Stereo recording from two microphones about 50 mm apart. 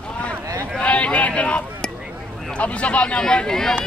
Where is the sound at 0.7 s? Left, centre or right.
Left.